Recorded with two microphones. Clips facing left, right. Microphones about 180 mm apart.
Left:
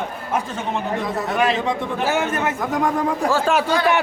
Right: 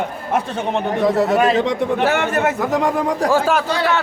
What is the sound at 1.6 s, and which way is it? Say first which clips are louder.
A man's voice: right 4 dB; 70° right (ahead or behind).